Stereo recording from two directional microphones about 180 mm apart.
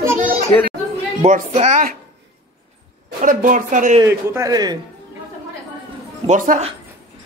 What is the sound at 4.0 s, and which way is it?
Speech, 20° right (ahead or behind).